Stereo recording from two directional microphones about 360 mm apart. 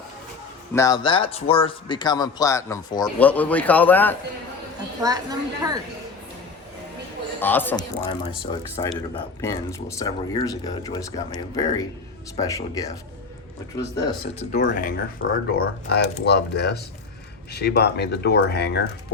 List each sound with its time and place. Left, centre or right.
0.7 s speech: centre
5.0 s a woman's voice: centre
7.3 s speech: centre
8.2 s speech: centre
14.3 s speech: left